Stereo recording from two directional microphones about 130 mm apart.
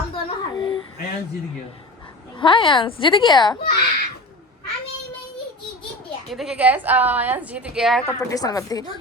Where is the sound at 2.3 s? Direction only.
40° left (ahead or behind).